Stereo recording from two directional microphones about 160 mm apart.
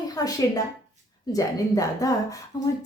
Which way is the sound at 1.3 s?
20° left (ahead or behind).